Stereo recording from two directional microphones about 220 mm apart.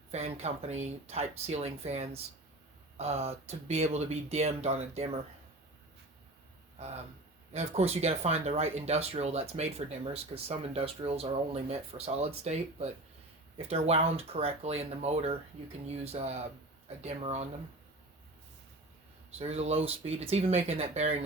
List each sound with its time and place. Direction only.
0.1 s speech: 30° right (ahead or behind)
6.7 s speech: 30° right (ahead or behind)
13.6 s speech: 30° right (ahead or behind)
19.4 s speech: 30° right (ahead or behind)